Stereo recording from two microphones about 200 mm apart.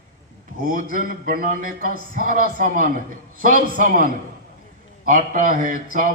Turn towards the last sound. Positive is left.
turn(degrees=-40)  # may be behind; listen again after turning